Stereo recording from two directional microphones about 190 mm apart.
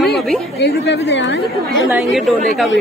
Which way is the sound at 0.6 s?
60° left (ahead or behind).